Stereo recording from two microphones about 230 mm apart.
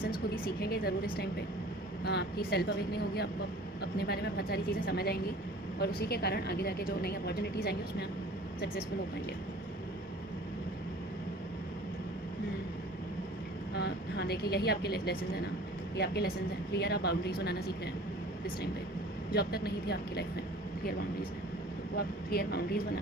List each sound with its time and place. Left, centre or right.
0.6 s a woman's voice: left
2.0 s a woman's voice: left
13.7 s a woman's voice: left
19.3 s a woman's voice: left
21.9 s speech: left